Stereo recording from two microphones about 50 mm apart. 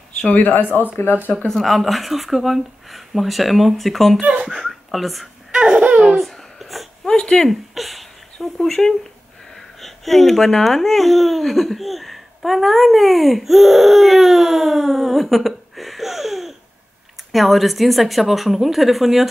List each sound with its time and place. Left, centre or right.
0.3 s speech: left
1.5 s speech: centre
5.5 s laughter: centre
6.0 s babbling: centre
7.1 s a sound: centre
7.4 s speech: centre